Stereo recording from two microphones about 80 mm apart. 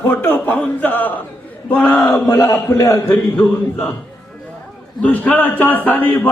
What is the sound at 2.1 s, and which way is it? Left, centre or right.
Mantra, left.